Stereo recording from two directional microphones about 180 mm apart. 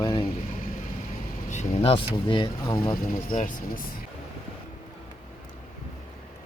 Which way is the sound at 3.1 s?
45° left (ahead or behind).